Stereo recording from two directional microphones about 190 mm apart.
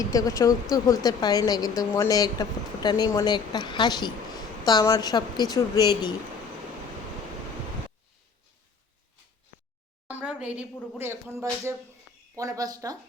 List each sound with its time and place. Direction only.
0.0 s speech: 20° left (ahead or behind)
10.1 s a sound: 5° right (ahead or behind)
10.9 s speech: 15° right (ahead or behind)